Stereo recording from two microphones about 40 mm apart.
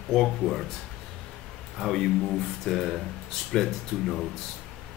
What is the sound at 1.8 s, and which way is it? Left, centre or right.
Speech, centre.